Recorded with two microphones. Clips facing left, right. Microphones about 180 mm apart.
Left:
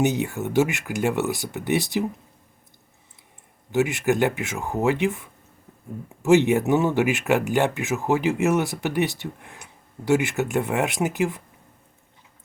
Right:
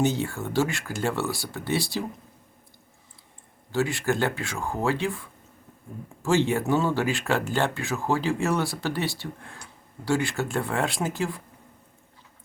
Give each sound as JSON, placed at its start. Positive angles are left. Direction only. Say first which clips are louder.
{"t": 0.0, "sound": "speech", "louder": "left 3 dB", "side_deg": 20}
{"t": 3.7, "sound": "speech", "louder": "left 4 dB", "side_deg": 20}